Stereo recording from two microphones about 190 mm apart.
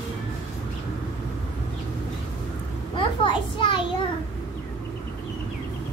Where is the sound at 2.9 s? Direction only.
25° left (ahead or behind).